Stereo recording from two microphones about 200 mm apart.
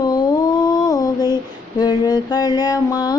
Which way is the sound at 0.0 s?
20° left (ahead or behind).